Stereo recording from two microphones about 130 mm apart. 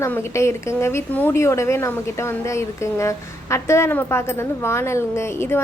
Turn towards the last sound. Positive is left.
turn(degrees=20)  # may be behind; listen again after turning